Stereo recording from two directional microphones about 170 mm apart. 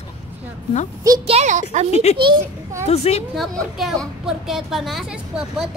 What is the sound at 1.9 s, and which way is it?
A woman's voice, 40° left (ahead or behind).